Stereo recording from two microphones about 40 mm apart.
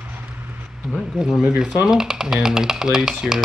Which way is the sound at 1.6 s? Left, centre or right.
Centre.